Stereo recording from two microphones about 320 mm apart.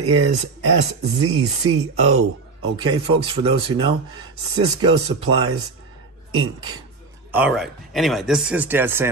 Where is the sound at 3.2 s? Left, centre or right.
Centre.